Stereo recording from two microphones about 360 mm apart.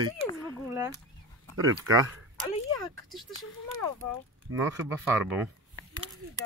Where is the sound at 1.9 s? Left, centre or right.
Right.